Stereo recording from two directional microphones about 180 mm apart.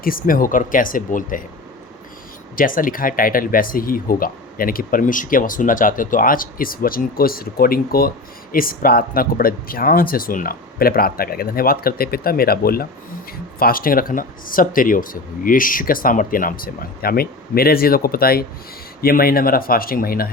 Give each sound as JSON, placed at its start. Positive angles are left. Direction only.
{"t": 0.0, "sound": "speech", "side_deg": 50}
{"t": 2.6, "sound": "speech", "side_deg": 50}